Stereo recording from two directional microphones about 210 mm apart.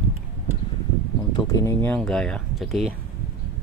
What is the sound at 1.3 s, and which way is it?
Speech, 15° left (ahead or behind).